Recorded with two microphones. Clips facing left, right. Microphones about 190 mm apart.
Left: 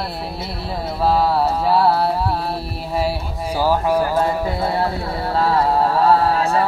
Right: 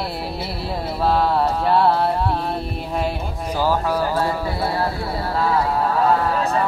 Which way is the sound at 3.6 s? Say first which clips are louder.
Left 3 dB; 15° left (ahead or behind).